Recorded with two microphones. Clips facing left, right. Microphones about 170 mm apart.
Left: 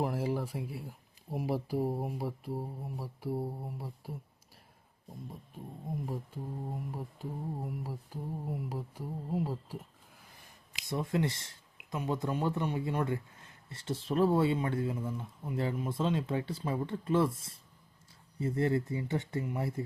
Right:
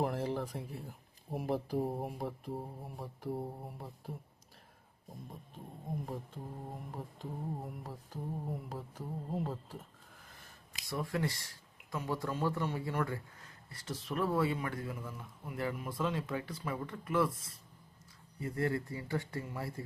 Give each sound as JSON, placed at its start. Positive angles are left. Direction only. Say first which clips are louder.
{"t": 0.0, "sound": "speech", "louder": "left 2 dB", "side_deg": 5}
{"t": 2.6, "sound": "mantra", "louder": "left 4 dB", "side_deg": 5}
{"t": 5.9, "sound": "speech", "louder": "left 2 dB", "side_deg": 0}
{"t": 6.9, "sound": "mantra", "louder": "left 3 dB", "side_deg": 10}
{"t": 10.8, "sound": "speech", "louder": "left 4 dB", "side_deg": 20}